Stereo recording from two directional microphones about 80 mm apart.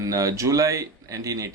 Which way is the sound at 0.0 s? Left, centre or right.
Right.